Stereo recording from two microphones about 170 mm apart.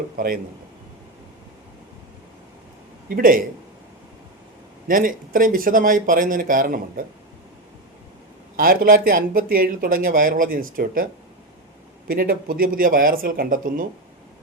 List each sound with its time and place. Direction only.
0.2 s speech: 55° right (ahead or behind)
3.2 s speech: 55° right (ahead or behind)
4.9 s speech: 55° right (ahead or behind)
8.5 s speech: 55° right (ahead or behind)